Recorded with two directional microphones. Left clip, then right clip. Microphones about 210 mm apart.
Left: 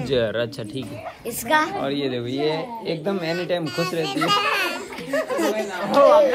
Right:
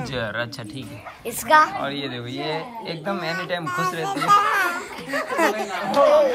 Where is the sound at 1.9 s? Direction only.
20° left (ahead or behind).